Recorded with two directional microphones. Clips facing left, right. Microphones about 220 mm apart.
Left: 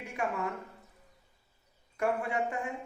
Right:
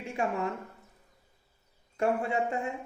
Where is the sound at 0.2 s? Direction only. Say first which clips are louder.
Right 3 dB; 25° right (ahead or behind).